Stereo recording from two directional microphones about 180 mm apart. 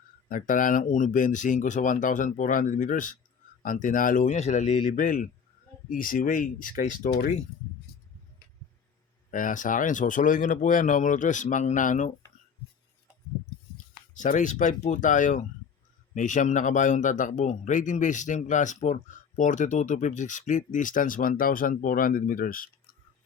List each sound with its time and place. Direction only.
0.3 s a man's voice: 50° left (ahead or behind)
9.3 s a man's voice: 45° left (ahead or behind)
13.7 s a man's voice: 45° left (ahead or behind)